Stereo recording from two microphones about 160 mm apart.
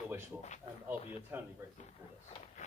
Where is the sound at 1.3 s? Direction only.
15° right (ahead or behind).